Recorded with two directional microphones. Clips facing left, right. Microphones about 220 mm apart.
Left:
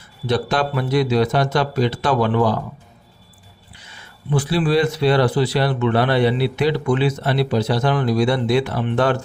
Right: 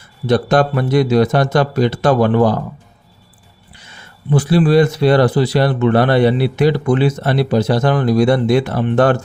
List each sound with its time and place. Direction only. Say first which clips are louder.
0.3 s speech: right 6 dB; 45° right (ahead or behind)
4.3 s speech: right 5 dB; 45° right (ahead or behind)